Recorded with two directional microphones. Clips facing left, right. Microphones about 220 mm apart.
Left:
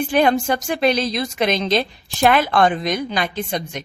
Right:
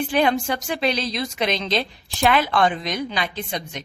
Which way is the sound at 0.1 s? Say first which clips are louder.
Left 5 dB; 45° left (ahead or behind).